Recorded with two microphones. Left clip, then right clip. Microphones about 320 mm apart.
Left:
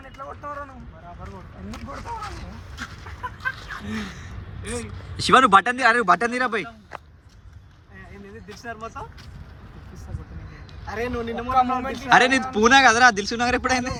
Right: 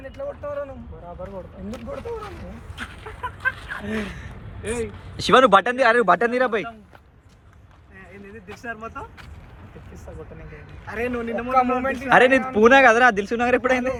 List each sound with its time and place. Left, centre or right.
3.5 s speech: centre
4.6 s speech: centre
8.6 s a man's voice: left
10.8 s a man's voice: left
12.0 s speech: centre